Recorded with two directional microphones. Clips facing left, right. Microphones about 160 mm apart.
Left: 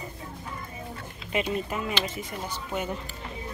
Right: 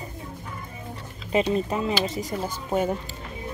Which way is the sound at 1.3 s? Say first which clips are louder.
Right 6 dB; 35° right (ahead or behind).